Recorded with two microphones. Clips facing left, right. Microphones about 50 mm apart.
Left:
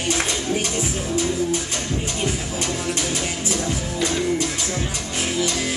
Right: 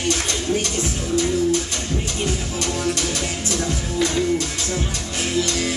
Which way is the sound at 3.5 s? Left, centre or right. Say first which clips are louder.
Right 1 dB; centre.